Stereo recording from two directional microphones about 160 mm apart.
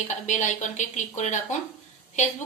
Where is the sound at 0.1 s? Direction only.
50° left (ahead or behind).